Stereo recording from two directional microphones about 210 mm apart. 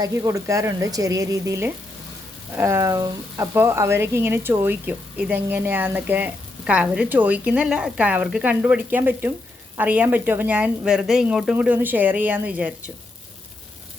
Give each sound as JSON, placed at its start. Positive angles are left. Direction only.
{"t": 0.0, "sound": "speech", "side_deg": -15}